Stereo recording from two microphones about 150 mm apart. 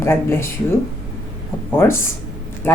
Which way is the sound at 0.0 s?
15° left (ahead or behind).